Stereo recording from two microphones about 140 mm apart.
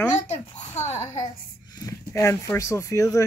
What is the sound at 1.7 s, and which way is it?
Speech, 25° left (ahead or behind).